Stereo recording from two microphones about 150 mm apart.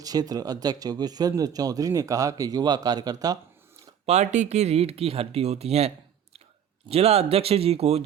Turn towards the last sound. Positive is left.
turn(degrees=-40)  # may be behind; listen again after turning